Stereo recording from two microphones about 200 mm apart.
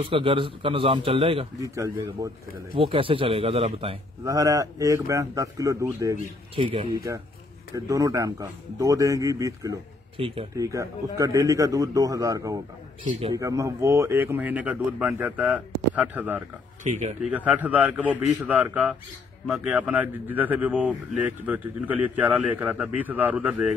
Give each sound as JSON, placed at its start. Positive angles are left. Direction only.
{"t": 0.0, "sound": "a man's voice", "side_deg": -25}
{"t": 4.2, "sound": "speech", "side_deg": -15}
{"t": 6.5, "sound": "a man's voice", "side_deg": -30}
{"t": 16.8, "sound": "speech", "side_deg": -35}
{"t": 17.2, "sound": "speech", "side_deg": -5}